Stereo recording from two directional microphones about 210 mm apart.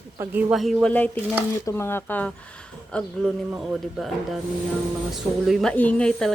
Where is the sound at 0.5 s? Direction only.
Centre (ahead or behind).